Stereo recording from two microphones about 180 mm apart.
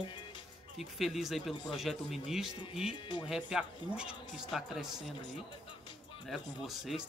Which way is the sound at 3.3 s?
5° right (ahead or behind).